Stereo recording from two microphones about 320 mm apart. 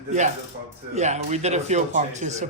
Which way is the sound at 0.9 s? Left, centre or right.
Right.